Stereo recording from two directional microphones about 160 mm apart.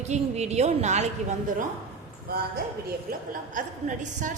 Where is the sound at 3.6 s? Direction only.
50° right (ahead or behind).